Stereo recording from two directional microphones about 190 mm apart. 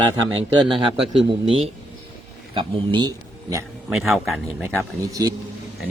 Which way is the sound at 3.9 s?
Centre (ahead or behind).